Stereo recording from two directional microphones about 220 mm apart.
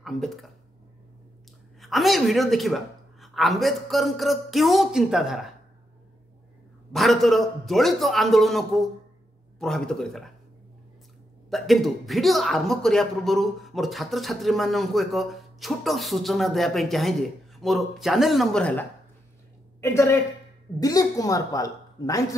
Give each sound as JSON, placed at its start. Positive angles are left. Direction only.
{"t": 0.0, "sound": "speech", "side_deg": 0}
{"t": 1.8, "sound": "speech", "side_deg": 0}
{"t": 6.9, "sound": "speech", "side_deg": 0}
{"t": 11.5, "sound": "a woman's voice", "side_deg": 0}